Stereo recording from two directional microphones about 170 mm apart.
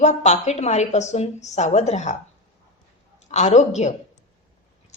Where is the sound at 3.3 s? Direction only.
40° left (ahead or behind).